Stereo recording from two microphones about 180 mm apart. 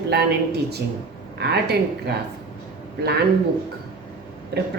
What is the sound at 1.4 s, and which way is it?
Speech, 65° right (ahead or behind).